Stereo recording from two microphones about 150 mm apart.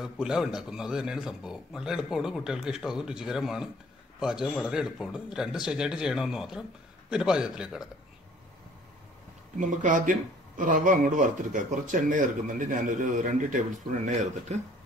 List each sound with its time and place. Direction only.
0.0 s a man's voice: 5° right (ahead or behind)
9.6 s speech: 60° right (ahead or behind)